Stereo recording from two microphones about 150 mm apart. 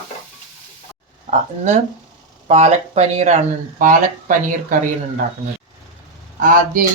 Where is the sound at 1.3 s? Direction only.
50° right (ahead or behind).